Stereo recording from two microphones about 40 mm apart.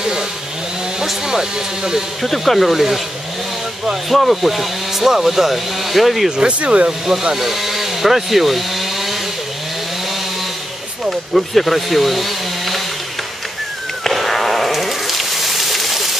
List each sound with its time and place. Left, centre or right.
1.0 s speech: centre
2.2 s speech: centre
4.1 s speech: centre
6.3 s speech: right
7.3 s speech: centre
11.1 s speech: centre
14.0 s a sound: centre